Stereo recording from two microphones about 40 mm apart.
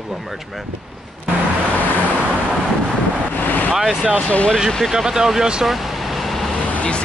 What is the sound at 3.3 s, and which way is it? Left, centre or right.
Vehicle, left.